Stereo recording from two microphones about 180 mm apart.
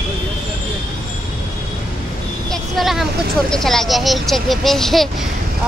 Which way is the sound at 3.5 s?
Centre (ahead or behind).